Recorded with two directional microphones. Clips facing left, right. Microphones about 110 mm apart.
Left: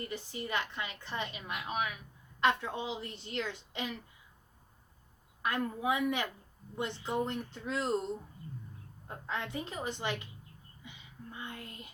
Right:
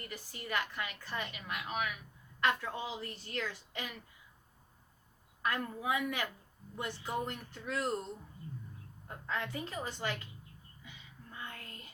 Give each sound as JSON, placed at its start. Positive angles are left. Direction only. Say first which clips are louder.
{"t": 0.1, "sound": "a woman's voice", "louder": "right 1 dB", "side_deg": 25}
{"t": 5.4, "sound": "a woman's voice", "louder": "left 3 dB", "side_deg": 20}
{"t": 9.0, "sound": "a woman's voice", "louder": "even", "side_deg": 20}
{"t": 10.8, "sound": "a sound", "louder": "left 5 dB", "side_deg": 20}